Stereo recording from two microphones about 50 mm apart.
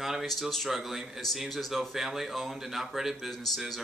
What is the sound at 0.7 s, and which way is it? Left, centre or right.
Speech, centre.